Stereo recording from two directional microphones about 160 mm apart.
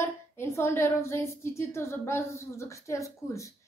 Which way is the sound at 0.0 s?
15° left (ahead or behind).